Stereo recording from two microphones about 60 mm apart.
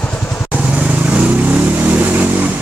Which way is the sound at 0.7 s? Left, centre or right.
Right.